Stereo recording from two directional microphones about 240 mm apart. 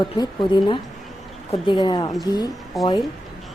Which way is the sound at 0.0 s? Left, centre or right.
Centre.